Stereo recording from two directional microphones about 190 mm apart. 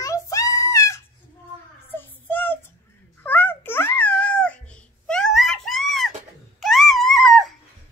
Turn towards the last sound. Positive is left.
turn(degrees=0)  # may be behind; listen again after turning